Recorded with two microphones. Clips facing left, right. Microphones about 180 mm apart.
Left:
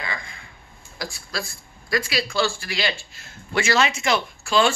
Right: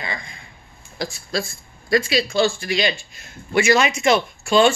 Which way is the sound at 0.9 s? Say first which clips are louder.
Right 6 dB; 25° right (ahead or behind).